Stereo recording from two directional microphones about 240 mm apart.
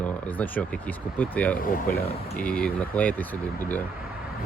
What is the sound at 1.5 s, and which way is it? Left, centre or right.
Speech, left.